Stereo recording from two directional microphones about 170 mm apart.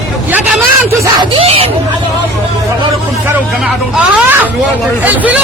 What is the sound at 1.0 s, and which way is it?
Music, 30° right (ahead or behind).